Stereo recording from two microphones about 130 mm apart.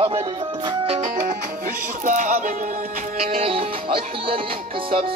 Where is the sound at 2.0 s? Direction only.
75° right (ahead or behind).